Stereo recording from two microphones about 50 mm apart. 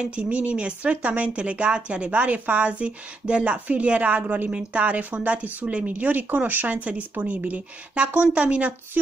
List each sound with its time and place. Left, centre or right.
0.0 s speech: right